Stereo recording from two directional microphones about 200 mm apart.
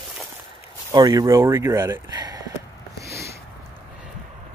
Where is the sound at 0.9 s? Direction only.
20° right (ahead or behind).